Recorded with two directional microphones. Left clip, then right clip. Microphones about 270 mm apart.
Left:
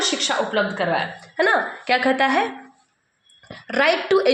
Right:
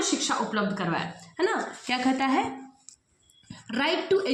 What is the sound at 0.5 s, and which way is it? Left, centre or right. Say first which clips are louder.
Speech: left 8 dB; right.